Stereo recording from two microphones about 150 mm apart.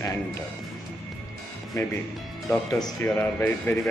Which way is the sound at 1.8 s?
20° left (ahead or behind).